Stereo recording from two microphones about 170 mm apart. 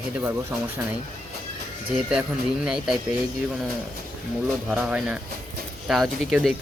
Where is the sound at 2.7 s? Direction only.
5° right (ahead or behind).